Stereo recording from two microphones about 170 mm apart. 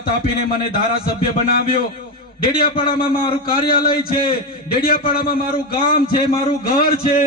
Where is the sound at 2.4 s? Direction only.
60° left (ahead or behind).